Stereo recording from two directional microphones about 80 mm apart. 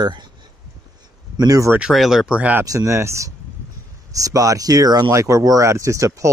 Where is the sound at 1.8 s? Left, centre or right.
Centre.